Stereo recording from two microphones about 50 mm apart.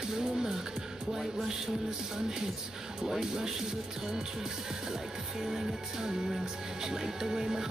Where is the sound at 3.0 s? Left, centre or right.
Centre.